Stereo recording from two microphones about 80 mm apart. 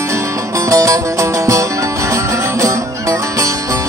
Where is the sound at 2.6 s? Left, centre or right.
Right.